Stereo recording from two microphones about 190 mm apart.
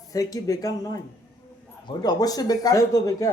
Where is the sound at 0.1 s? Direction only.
20° left (ahead or behind).